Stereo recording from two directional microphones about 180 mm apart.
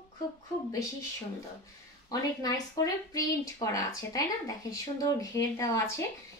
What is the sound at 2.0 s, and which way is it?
Speech, 20° left (ahead or behind).